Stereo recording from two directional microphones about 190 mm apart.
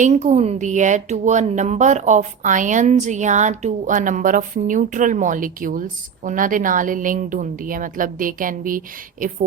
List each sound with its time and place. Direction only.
0.0 s a woman's voice: 40° right (ahead or behind)